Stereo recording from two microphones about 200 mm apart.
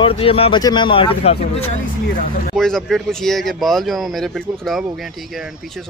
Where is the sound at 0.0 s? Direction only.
25° left (ahead or behind).